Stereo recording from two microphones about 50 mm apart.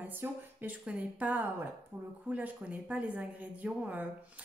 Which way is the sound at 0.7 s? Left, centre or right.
Right.